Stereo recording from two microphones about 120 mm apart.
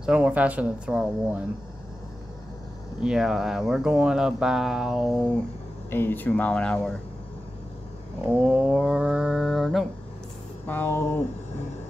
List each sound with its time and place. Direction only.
0.0 s speech: 10° right (ahead or behind)
3.0 s speech: 5° right (ahead or behind)
5.9 s speech: 20° left (ahead or behind)
8.3 s speech: 5° right (ahead or behind)
10.7 s speech: 20° left (ahead or behind)